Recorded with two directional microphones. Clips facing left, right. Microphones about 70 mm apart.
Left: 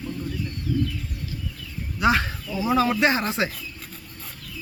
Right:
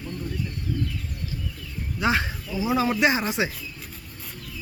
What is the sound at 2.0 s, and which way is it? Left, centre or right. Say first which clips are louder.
Speech: left 3 dB; centre.